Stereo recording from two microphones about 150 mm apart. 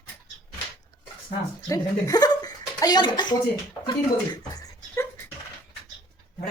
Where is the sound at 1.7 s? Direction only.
25° left (ahead or behind).